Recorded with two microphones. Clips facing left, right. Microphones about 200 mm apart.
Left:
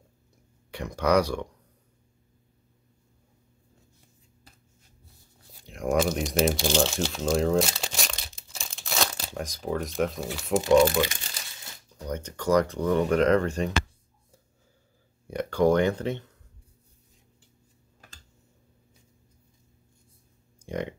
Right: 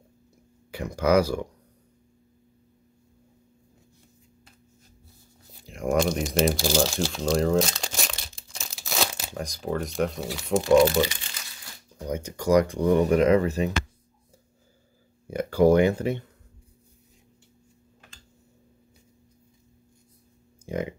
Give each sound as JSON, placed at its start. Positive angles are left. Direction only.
{"t": 0.7, "sound": "speech", "side_deg": 0}
{"t": 5.6, "sound": "crumpling", "side_deg": 0}
{"t": 9.4, "sound": "speech", "side_deg": 0}
{"t": 11.1, "sound": "crumpling", "side_deg": 40}
{"t": 12.0, "sound": "speech", "side_deg": -10}
{"t": 15.2, "sound": "speech", "side_deg": -5}
{"t": 20.6, "sound": "a sound", "side_deg": 0}